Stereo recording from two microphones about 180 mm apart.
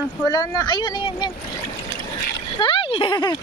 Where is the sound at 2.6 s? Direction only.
30° left (ahead or behind).